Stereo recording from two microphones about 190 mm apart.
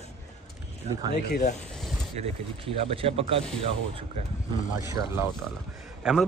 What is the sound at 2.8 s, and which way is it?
Speech, 30° right (ahead or behind).